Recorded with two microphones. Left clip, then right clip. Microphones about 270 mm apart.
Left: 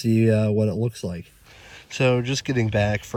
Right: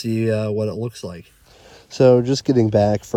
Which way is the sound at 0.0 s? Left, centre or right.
Right.